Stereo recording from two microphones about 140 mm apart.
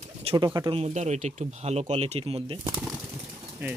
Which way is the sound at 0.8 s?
55° right (ahead or behind).